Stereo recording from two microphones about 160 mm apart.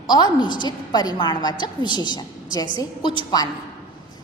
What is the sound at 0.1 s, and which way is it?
A woman's voice, 30° left (ahead or behind).